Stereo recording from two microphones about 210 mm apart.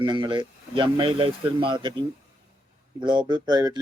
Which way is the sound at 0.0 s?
20° right (ahead or behind).